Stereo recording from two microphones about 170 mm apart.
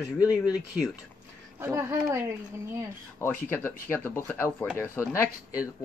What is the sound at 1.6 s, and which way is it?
Speech, 15° right (ahead or behind).